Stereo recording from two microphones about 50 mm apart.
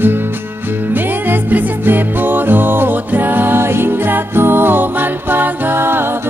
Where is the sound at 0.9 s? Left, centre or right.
Right.